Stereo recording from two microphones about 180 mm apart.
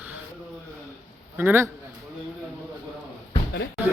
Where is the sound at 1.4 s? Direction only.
10° right (ahead or behind).